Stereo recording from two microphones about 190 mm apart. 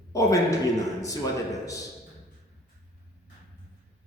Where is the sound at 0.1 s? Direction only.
15° left (ahead or behind).